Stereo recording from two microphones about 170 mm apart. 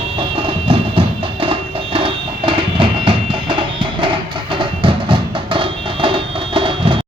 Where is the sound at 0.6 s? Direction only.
30° right (ahead or behind).